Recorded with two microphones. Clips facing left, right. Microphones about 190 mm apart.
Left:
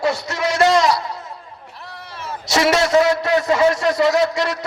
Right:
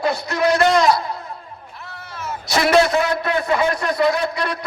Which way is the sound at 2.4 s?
85° left.